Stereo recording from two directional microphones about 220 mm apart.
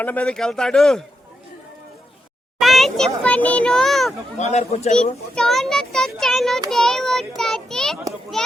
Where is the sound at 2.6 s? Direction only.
Centre (ahead or behind).